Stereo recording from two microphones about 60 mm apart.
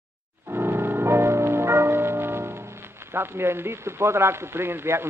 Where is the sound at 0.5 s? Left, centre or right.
Right.